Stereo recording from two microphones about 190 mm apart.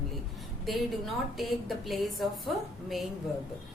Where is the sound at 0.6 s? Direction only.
Centre (ahead or behind).